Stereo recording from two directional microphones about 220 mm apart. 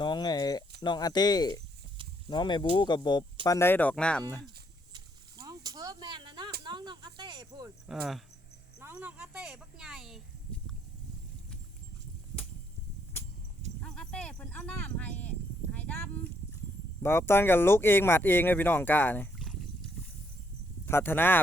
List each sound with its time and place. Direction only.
0.0 s a sound: 20° left (ahead or behind)
0.8 s speech: 20° left (ahead or behind)
4.9 s a sound: 15° right (ahead or behind)
6.7 s cricket: 20° right (ahead or behind)
7.9 s speech: centre (ahead or behind)
13.8 s speech: 5° left (ahead or behind)
20.8 s speech: 10° left (ahead or behind)